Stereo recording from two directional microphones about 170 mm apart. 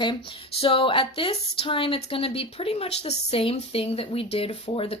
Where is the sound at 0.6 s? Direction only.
35° left (ahead or behind).